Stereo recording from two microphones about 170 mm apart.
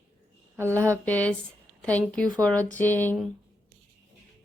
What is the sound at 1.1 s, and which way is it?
Speech, 10° left (ahead or behind).